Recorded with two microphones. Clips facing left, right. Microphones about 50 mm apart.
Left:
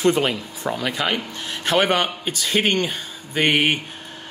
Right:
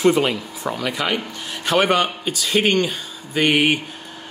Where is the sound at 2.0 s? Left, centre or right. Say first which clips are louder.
Right 2 dB; left.